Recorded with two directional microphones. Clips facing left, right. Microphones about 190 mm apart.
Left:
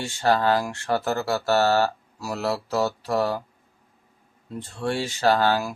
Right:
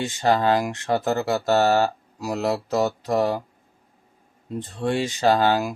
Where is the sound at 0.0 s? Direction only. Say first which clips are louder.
Right 1 dB; 20° right (ahead or behind).